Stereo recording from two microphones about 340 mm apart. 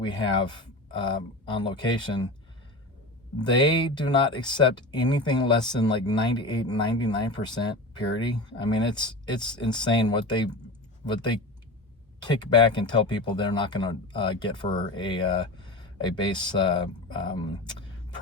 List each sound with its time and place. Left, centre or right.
0.0 s speech: centre
3.3 s speech: centre
8.4 s speech: centre